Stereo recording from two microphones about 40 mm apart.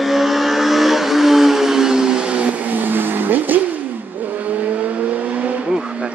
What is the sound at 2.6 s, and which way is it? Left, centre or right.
Vehicle, right.